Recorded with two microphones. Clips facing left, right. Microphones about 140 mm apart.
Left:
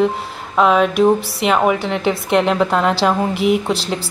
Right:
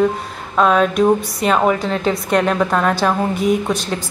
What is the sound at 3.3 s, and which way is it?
Speech, 80° left.